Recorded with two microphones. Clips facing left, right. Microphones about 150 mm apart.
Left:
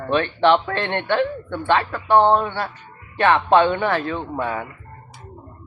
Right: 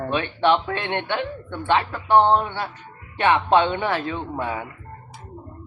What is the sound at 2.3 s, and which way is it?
Speech, 20° right (ahead or behind).